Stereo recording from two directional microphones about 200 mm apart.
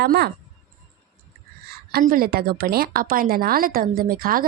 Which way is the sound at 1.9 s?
45° right (ahead or behind).